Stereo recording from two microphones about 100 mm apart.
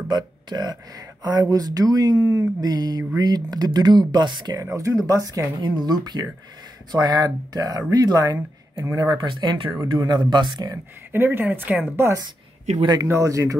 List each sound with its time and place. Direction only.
0.1 s speech: 45° right (ahead or behind)
4.6 s speech: 35° right (ahead or behind)
5.6 s speech: 45° right (ahead or behind)
11.1 s speech: 25° right (ahead or behind)
12.0 s speech: 30° right (ahead or behind)